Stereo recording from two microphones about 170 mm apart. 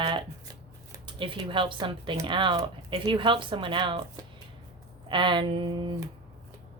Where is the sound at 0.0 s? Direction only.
30° right (ahead or behind).